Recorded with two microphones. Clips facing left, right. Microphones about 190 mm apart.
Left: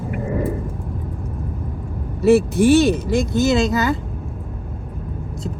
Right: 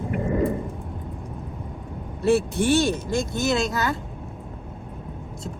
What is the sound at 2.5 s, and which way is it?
Speech, 60° left (ahead or behind).